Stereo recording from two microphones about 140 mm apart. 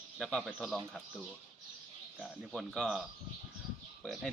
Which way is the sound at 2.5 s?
Centre (ahead or behind).